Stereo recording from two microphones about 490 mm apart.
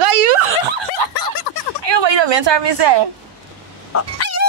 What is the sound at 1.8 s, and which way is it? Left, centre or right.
Speech, right.